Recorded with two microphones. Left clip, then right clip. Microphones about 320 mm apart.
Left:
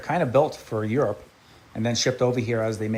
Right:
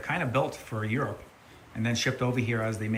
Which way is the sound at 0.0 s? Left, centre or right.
Centre.